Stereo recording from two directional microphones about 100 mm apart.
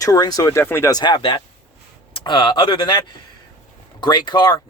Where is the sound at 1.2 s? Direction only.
60° left (ahead or behind).